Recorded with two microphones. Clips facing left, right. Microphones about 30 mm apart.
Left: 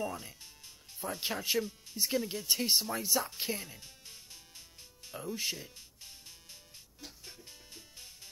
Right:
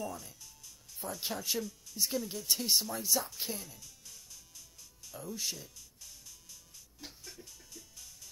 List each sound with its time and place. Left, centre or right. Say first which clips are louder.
0.0 s speech: left 3 dB; left; by 3.3 s centre
3.3 s music: left 3 dB; left